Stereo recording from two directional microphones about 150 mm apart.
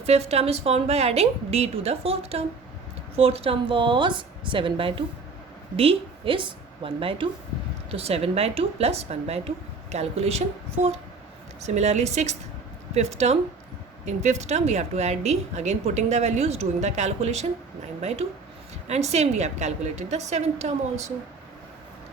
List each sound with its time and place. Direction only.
0.0 s a woman's voice: 45° right (ahead or behind)
18.9 s speech: 45° right (ahead or behind)